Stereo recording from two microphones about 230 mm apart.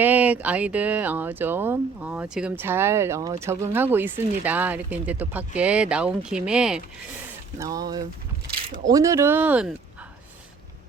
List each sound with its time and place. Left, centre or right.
0.0 s speech: centre
7.6 s speech: centre